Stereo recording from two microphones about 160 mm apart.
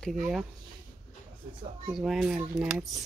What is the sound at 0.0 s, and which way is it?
Speech, centre (ahead or behind).